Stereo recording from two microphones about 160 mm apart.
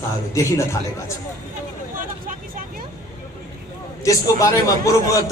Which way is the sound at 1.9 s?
60° right (ahead or behind).